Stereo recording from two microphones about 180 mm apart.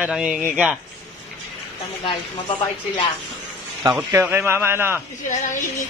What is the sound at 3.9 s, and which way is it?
A man's voice, 10° right (ahead or behind).